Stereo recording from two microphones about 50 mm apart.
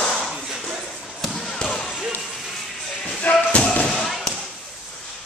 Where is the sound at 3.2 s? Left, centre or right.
Left.